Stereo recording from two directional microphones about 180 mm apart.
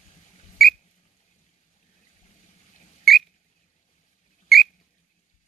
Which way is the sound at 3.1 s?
Centre (ahead or behind).